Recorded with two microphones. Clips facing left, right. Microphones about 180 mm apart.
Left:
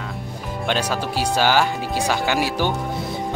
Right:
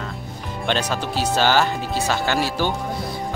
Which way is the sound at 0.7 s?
10° left (ahead or behind).